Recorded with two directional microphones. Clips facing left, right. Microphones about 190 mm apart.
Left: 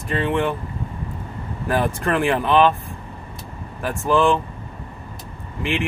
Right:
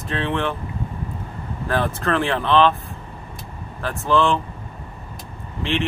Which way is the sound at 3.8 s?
15° left (ahead or behind).